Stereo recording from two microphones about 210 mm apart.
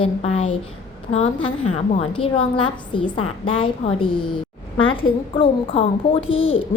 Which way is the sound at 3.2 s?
90° left.